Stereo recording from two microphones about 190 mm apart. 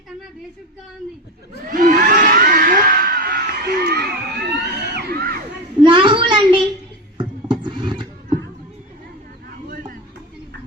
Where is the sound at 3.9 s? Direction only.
60° right (ahead or behind).